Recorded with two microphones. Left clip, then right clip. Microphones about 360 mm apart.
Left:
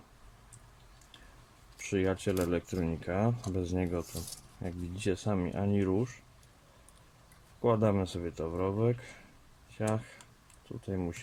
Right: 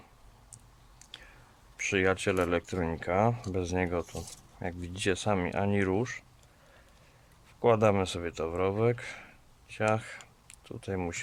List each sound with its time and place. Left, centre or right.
1.8 s speech: right
7.6 s speech: right